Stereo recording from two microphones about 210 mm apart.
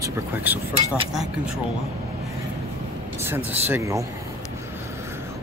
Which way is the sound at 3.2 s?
10° right (ahead or behind).